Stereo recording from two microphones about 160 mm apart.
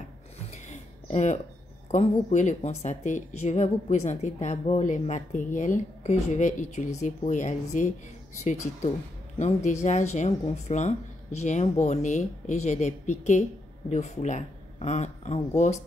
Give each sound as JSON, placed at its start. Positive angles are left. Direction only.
{"t": 0.5, "sound": "a sound", "side_deg": 45}
{"t": 1.9, "sound": "a woman's voice", "side_deg": 50}
{"t": 9.4, "sound": "a woman's voice", "side_deg": 45}